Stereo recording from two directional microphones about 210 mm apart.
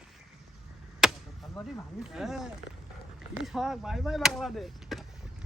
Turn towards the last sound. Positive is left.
turn(degrees=0)  # may be behind; listen again after turning